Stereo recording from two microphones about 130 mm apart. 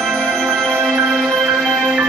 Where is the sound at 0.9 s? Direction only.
5° right (ahead or behind).